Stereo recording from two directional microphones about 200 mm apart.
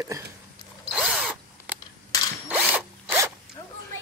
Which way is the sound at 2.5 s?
10° right (ahead or behind).